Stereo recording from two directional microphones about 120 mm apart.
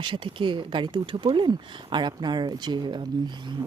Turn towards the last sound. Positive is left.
turn(degrees=-40)  # may be behind; listen again after turning